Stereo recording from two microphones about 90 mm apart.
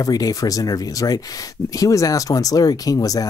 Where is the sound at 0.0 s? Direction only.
45° left (ahead or behind).